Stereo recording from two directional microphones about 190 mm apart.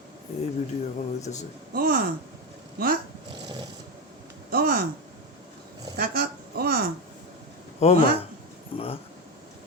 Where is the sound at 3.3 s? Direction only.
25° right (ahead or behind).